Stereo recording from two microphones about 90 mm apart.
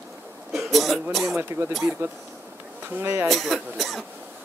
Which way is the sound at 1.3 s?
30° right (ahead or behind).